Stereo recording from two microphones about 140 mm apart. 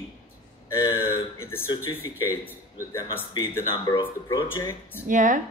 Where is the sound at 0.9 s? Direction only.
15° left (ahead or behind).